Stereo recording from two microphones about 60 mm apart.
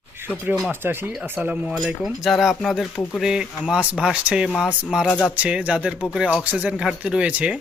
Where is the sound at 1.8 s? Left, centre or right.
Centre.